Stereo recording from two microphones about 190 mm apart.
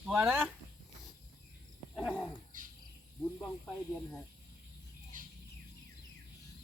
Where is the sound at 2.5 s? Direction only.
45° right (ahead or behind).